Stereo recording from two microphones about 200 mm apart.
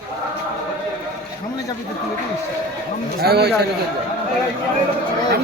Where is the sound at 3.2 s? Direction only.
50° right (ahead or behind).